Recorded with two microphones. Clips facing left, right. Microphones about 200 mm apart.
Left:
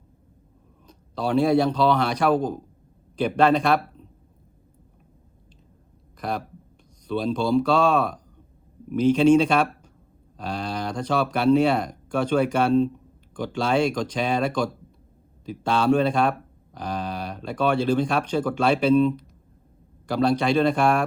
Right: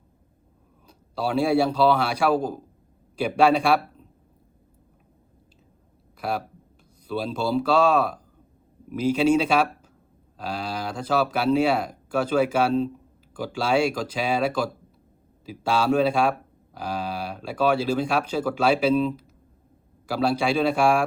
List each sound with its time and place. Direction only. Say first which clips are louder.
0.9 s a man's voice: left 1 dB; 5° right (ahead or behind)
6.1 s speech: right 1 dB; 5° right (ahead or behind)